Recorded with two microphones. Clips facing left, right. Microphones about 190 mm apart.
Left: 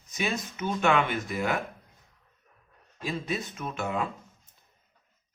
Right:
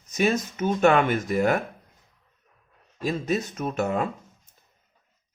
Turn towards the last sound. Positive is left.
turn(degrees=-45)  # may be behind; listen again after turning